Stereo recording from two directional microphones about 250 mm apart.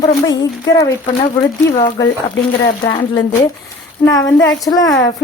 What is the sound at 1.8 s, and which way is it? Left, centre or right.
Speech, centre.